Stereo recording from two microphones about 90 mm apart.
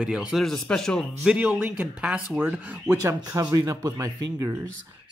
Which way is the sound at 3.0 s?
35° right (ahead or behind).